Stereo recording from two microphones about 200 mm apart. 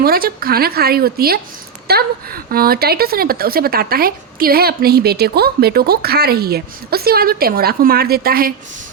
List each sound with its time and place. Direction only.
0.0 s a woman's voice: 50° right (ahead or behind)